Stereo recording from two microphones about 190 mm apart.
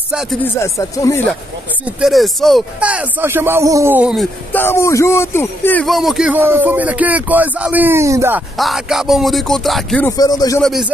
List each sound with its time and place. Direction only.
0.6 s speech: 15° left (ahead or behind)
2.0 s speech: centre (ahead or behind)
4.5 s speech: 10° left (ahead or behind); by 8.4 s 15° right (ahead or behind)
8.5 s speech: centre (ahead or behind)
10.0 s speech: 20° left (ahead or behind)
10.6 s speech: centre (ahead or behind)